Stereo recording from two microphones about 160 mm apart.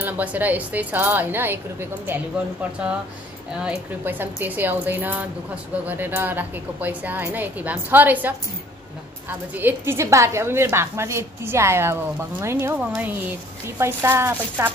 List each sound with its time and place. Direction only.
0.0 s a woman's voice: 10° right (ahead or behind)
3.5 s a woman's voice: 10° right (ahead or behind)